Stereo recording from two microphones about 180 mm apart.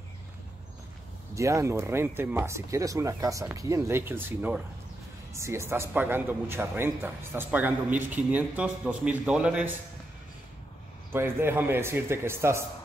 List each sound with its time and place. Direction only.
1.3 s speech: 15° right (ahead or behind)
11.1 s speech: 10° right (ahead or behind)